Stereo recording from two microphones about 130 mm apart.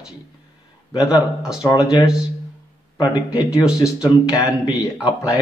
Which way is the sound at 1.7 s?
30° left (ahead or behind).